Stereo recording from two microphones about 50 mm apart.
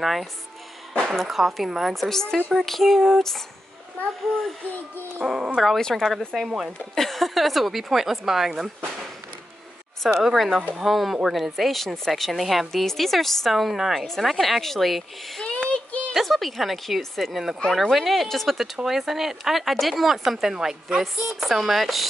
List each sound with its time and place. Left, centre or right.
0.0 s speech: centre
5.2 s a woman's voice: centre
5.8 s speech: centre
6.1 s speech: centre
10.0 s speech: centre
15.4 s child singing: left
16.1 s a woman's voice: centre
21.0 s speech: centre